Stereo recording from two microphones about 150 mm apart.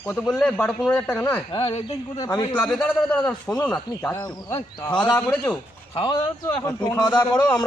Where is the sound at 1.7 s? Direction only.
40° left (ahead or behind).